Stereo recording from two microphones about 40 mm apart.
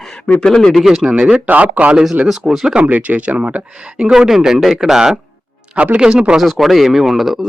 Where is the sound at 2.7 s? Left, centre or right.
Right.